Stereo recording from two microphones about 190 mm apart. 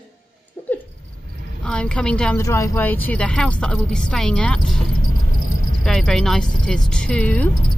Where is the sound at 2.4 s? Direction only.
15° left (ahead or behind).